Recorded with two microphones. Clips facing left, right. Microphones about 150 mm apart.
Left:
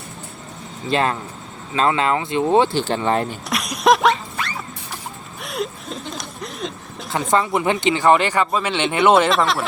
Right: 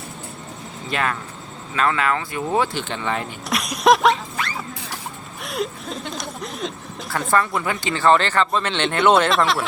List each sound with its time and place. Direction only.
0.9 s speech: 30° left (ahead or behind)
3.5 s a sound: centre (ahead or behind)
7.3 s speech: 20° left (ahead or behind); by 9.6 s centre (ahead or behind)